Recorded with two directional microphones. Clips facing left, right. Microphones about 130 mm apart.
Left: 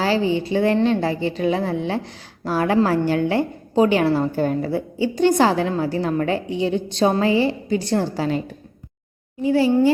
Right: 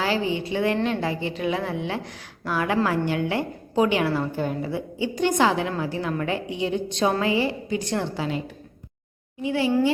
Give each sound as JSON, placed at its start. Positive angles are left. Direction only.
{"t": 0.0, "sound": "a woman's voice", "side_deg": 30}